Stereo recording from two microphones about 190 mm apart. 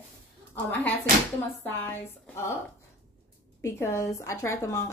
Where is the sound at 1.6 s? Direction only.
10° left (ahead or behind).